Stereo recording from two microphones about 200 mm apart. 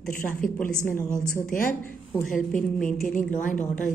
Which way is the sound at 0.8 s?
40° left (ahead or behind).